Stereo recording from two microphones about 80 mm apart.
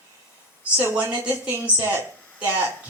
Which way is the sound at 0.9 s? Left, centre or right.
Centre.